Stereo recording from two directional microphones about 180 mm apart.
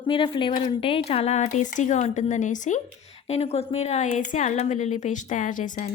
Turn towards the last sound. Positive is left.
turn(degrees=45)  # may be behind; listen again after turning